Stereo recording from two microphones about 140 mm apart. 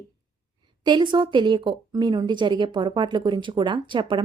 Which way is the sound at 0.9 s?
35° right (ahead or behind).